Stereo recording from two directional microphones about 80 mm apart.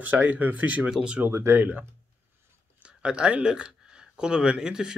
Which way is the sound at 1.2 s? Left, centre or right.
Right.